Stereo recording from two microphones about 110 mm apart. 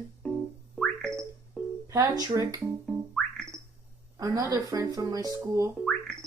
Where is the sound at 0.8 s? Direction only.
5° left (ahead or behind).